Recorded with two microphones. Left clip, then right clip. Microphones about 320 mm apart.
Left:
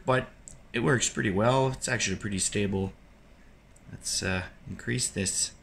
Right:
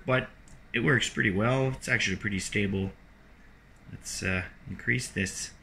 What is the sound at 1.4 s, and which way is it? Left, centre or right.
Speech, left.